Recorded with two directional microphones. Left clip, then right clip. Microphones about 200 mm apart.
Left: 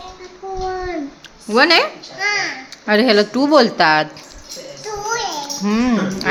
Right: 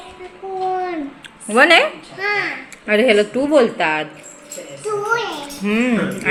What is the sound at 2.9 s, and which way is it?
A woman's voice, 40° left (ahead or behind).